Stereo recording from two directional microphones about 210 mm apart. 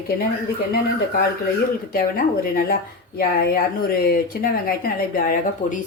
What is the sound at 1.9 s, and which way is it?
Speech, 45° left (ahead or behind).